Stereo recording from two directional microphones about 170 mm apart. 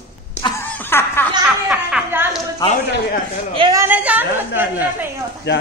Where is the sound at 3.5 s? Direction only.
30° right (ahead or behind).